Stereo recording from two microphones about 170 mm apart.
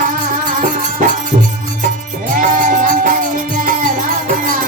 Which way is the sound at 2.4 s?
50° right (ahead or behind).